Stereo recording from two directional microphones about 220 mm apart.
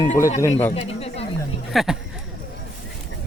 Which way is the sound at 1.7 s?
Centre (ahead or behind).